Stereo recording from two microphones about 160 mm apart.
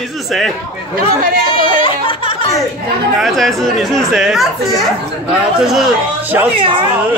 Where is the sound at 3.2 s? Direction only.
Centre (ahead or behind).